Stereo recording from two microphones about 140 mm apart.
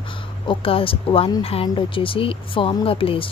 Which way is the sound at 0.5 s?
40° left (ahead or behind).